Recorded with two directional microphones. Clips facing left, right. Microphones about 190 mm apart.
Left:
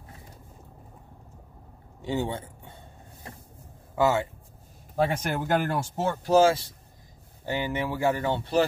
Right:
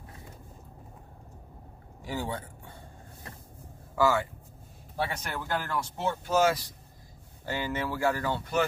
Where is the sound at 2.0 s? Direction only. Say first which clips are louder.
Left 5 dB; 25° left (ahead or behind).